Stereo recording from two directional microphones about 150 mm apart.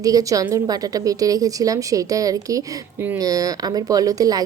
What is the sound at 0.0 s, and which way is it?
Speech, 25° right (ahead or behind).